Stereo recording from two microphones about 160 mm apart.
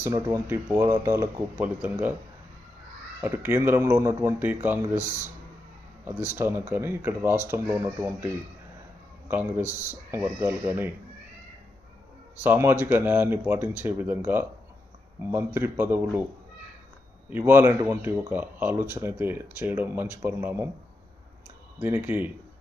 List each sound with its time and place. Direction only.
0.0 s speech: 20° right (ahead or behind)
3.2 s speech: 15° right (ahead or behind)
6.1 s speech: 10° right (ahead or behind)
9.3 s speech: 10° right (ahead or behind)
12.4 s speech: 15° right (ahead or behind)
17.2 s speech: 15° right (ahead or behind)
21.8 s speech: 10° right (ahead or behind)